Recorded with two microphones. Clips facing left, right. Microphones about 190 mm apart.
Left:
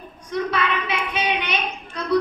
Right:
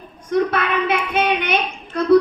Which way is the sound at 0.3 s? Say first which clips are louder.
Right 5 dB; 50° right (ahead or behind).